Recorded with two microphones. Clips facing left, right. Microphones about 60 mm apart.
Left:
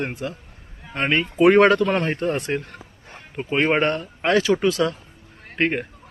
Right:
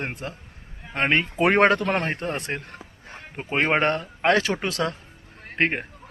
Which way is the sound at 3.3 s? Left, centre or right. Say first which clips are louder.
Left 2 dB; right.